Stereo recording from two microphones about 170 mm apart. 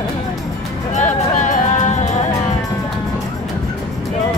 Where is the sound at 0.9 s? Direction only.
45° left (ahead or behind).